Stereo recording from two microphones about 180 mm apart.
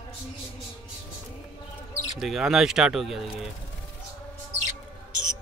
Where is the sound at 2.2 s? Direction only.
Centre (ahead or behind).